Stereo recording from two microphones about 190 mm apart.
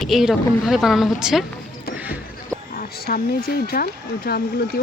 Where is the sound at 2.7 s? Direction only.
50° left (ahead or behind).